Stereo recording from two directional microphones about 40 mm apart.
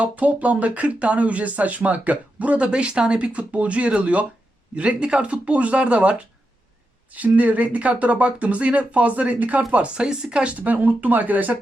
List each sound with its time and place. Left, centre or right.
0.0 s speech: right
10.0 s speech: right
10.6 s speech: right